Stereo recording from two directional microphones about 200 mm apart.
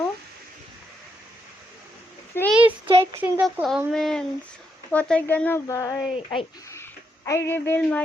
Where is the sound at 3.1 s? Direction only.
10° right (ahead or behind).